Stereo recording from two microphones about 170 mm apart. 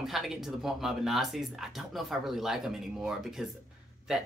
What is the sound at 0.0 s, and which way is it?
Speech, centre (ahead or behind).